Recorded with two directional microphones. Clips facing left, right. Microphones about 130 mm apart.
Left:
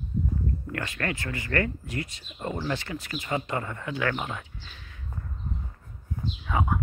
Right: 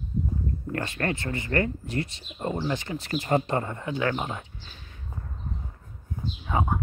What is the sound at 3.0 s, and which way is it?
Speech, 40° right (ahead or behind).